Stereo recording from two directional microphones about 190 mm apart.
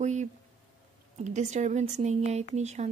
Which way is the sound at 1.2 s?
40° right (ahead or behind).